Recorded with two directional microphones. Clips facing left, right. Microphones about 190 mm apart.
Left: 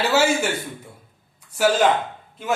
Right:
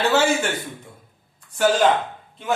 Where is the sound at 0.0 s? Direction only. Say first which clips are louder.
Even; 10° left (ahead or behind).